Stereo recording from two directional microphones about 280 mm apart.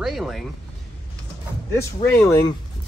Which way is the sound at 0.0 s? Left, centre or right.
Centre.